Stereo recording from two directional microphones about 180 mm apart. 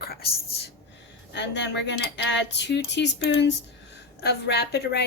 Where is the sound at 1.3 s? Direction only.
80° left.